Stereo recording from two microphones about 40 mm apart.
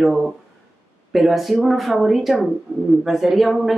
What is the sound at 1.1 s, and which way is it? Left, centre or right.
Speech, centre.